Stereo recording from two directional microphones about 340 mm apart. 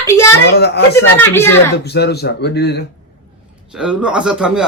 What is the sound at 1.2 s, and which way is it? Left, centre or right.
Speech, centre.